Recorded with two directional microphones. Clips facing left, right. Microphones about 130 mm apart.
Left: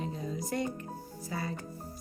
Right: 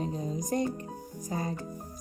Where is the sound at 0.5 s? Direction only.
35° right (ahead or behind).